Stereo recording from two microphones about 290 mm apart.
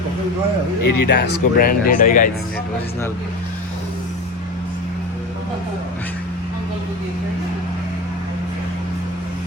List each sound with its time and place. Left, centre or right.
0.9 s speech: left